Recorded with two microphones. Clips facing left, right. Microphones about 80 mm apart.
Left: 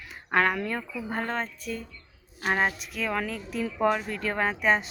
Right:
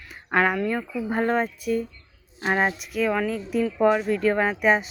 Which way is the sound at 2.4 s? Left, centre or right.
Right.